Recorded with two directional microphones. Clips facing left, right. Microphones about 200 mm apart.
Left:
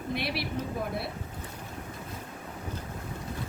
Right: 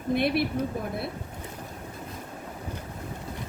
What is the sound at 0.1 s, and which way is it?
Speech, 50° right (ahead or behind).